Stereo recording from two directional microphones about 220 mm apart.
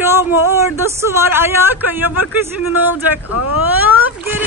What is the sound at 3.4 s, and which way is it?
Speech, 90° left.